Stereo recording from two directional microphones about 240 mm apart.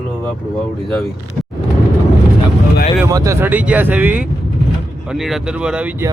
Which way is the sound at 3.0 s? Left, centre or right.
Centre.